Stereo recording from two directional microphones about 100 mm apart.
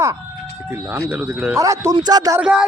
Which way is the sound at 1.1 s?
10° right (ahead or behind).